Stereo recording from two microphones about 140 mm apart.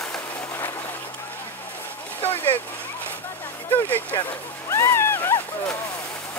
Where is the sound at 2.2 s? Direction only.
15° left (ahead or behind).